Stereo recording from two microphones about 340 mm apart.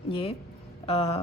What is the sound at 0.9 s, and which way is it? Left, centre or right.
Speech, centre.